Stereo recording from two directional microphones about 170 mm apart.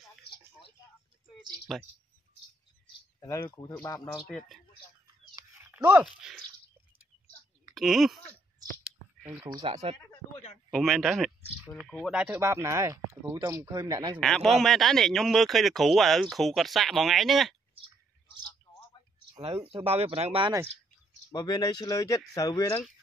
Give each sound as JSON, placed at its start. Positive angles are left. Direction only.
{"t": 1.7, "sound": "speech", "side_deg": 0}
{"t": 3.2, "sound": "speech", "side_deg": 15}
{"t": 4.3, "sound": "speech", "side_deg": 0}
{"t": 5.3, "sound": "a sound", "side_deg": -15}
{"t": 7.7, "sound": "speech", "side_deg": 0}
{"t": 8.8, "sound": "a sound", "side_deg": -10}
{"t": 9.6, "sound": "speech", "side_deg": -35}
{"t": 10.7, "sound": "speech", "side_deg": 0}
{"t": 14.2, "sound": "speech", "side_deg": 5}
{"t": 19.6, "sound": "speech", "side_deg": -35}
{"t": 21.3, "sound": "speech", "side_deg": 25}